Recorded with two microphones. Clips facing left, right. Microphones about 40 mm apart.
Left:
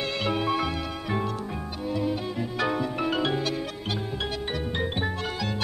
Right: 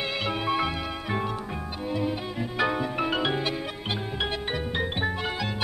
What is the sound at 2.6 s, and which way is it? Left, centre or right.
Music, centre.